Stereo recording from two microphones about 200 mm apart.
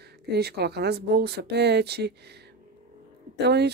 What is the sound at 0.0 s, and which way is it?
Speech, 55° right (ahead or behind).